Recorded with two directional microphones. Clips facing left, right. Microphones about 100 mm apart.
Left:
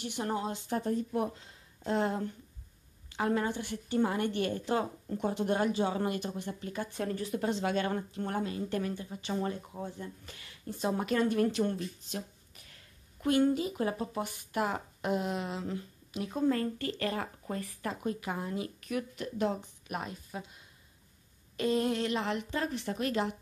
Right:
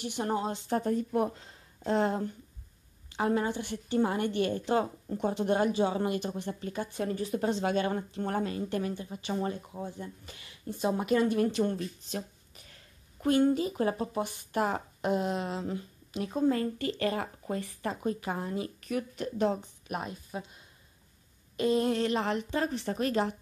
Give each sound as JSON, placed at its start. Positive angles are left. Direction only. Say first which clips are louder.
{"t": 0.2, "sound": "a woman's voice", "louder": "right 3 dB", "side_deg": -30}
{"t": 0.7, "sound": "speech", "louder": "right 3 dB", "side_deg": -55}
{"t": 1.9, "sound": "a woman's voice", "louder": "right 3 dB", "side_deg": -30}
{"t": 7.8, "sound": "a woman's voice", "louder": "right 2 dB", "side_deg": -15}
{"t": 8.3, "sound": "speech", "louder": "right 3 dB", "side_deg": -50}
{"t": 8.6, "sound": "a woman's voice", "louder": "right 1 dB", "side_deg": -20}
{"t": 9.8, "sound": "a woman's voice", "louder": "right 1 dB", "side_deg": -5}
{"t": 13.2, "sound": "a woman's voice", "louder": "right 2 dB", "side_deg": -35}
{"t": 16.4, "sound": "a woman's voice", "louder": "right 2 dB", "side_deg": -20}
{"t": 20.0, "sound": "a woman's voice", "louder": "right 1 dB", "side_deg": -20}
{"t": 21.5, "sound": "speech", "louder": "right 3 dB", "side_deg": -20}
{"t": 21.8, "sound": "a woman's voice", "louder": "right 3 dB", "side_deg": -35}